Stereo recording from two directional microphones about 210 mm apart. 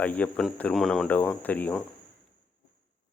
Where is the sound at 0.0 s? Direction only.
5° left (ahead or behind).